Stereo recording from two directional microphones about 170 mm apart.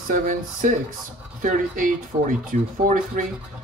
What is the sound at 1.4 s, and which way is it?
Speech, 50° right (ahead or behind).